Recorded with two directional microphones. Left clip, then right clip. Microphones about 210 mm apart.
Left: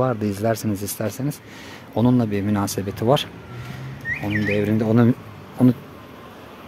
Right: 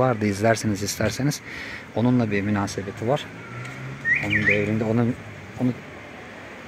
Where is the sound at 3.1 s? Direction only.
30° left (ahead or behind).